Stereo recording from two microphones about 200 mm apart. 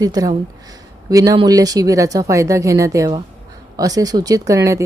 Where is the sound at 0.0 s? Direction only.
20° right (ahead or behind).